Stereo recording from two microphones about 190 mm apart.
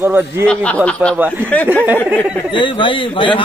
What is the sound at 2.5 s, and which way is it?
Speech, 25° left (ahead or behind).